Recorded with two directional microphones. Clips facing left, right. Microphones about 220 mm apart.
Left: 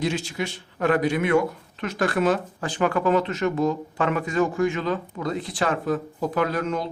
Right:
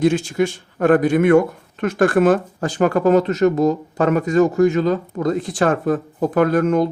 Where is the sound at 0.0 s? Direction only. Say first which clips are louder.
Right 9 dB; 50° right (ahead or behind).